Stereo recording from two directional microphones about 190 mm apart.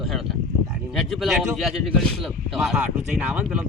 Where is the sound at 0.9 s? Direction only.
Centre (ahead or behind).